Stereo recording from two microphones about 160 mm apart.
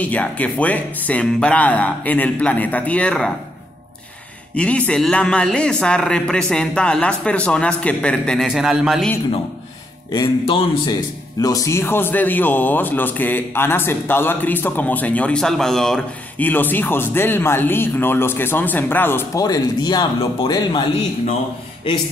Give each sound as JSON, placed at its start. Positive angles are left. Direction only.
{"t": 0.0, "sound": "speech", "side_deg": 10}
{"t": 4.6, "sound": "a man's voice", "side_deg": 5}
{"t": 10.1, "sound": "speech", "side_deg": 35}
{"t": 11.4, "sound": "speech", "side_deg": 20}